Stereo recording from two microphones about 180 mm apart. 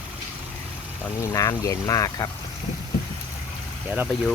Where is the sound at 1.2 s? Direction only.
20° left (ahead or behind).